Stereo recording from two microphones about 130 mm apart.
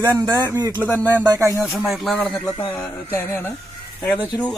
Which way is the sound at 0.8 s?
15° left (ahead or behind).